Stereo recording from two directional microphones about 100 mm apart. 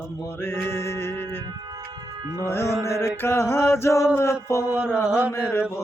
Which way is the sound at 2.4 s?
25° left (ahead or behind).